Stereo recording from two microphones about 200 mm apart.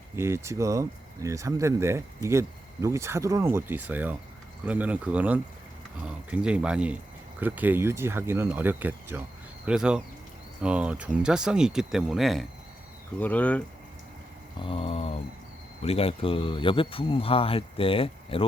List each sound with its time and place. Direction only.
0.2 s speech: 15° right (ahead or behind); by 13.6 s 5° left (ahead or behind)
14.6 s speech: 30° left (ahead or behind)